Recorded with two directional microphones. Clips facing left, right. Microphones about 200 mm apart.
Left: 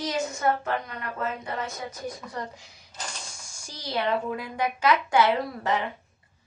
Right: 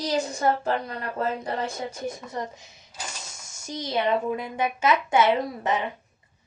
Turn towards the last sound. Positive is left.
turn(degrees=-20)  # may be behind; listen again after turning